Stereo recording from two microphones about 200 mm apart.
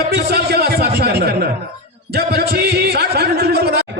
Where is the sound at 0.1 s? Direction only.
55° right (ahead or behind).